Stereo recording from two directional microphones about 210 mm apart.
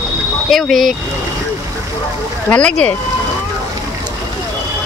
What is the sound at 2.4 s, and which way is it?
Speech, 5° left (ahead or behind).